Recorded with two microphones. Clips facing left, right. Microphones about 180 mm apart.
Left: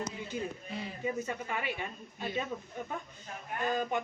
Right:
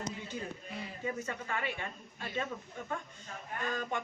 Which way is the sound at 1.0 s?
15° left (ahead or behind).